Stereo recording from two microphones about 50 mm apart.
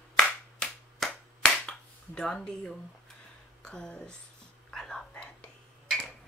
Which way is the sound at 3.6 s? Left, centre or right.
Centre.